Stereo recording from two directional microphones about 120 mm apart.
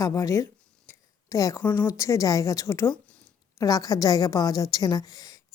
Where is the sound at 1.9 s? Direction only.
25° left (ahead or behind).